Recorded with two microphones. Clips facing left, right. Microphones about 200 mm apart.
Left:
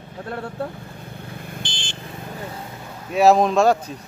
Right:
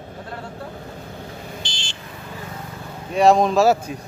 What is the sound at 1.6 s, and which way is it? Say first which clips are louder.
Vehicle: left 1 dB; 55° left (ahead or behind).